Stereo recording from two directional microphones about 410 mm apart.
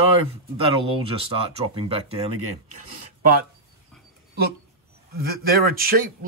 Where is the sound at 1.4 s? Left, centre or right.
Centre.